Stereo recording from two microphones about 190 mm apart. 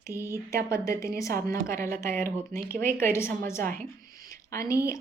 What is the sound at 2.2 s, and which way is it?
Speech, 50° right (ahead or behind).